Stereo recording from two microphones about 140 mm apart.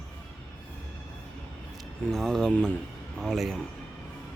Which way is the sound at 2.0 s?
5° left (ahead or behind).